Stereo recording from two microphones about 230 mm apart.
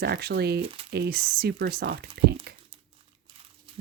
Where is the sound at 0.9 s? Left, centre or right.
Right.